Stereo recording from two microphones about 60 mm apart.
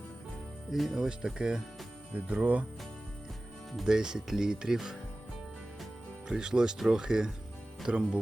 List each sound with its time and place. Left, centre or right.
0.7 s speech: centre
1.0 s speech: centre
3.8 s speech: centre
6.2 s speech: centre